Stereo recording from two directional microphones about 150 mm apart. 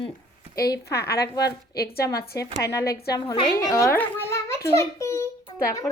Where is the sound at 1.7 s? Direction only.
90° left.